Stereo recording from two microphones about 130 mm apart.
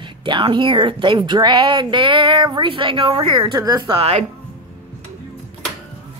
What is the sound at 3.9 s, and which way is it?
Speech, 50° right (ahead or behind).